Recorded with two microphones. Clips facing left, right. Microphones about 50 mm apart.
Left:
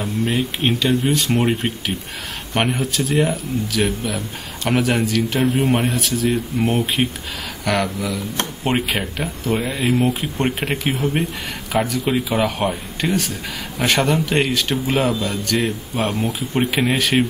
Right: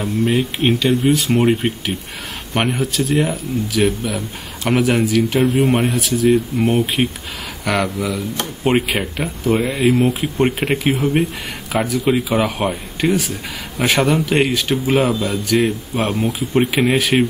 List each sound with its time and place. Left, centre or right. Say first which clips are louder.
0.0 s speech: right 3 dB; centre